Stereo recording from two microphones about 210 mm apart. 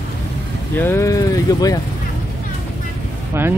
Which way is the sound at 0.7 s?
10° left (ahead or behind).